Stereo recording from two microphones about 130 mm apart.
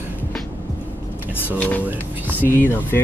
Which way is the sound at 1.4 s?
10° left (ahead or behind).